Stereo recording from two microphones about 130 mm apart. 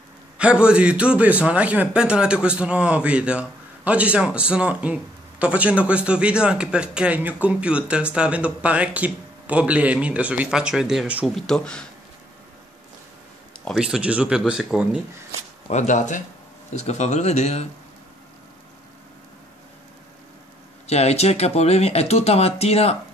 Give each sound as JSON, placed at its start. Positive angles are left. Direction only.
{"t": 0.4, "sound": "a man's voice", "side_deg": -10}
{"t": 11.3, "sound": "speech", "side_deg": 5}
{"t": 13.7, "sound": "speech", "side_deg": -5}
{"t": 15.7, "sound": "speech", "side_deg": 70}
{"t": 20.8, "sound": "speech", "side_deg": 55}